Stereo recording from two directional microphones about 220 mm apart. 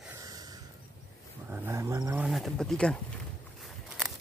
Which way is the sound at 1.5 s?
10° right (ahead or behind).